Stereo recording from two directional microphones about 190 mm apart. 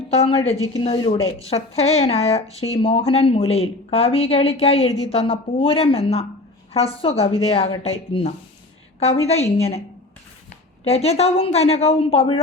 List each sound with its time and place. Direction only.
0.1 s speech: 30° left (ahead or behind)
10.8 s speech: 35° left (ahead or behind)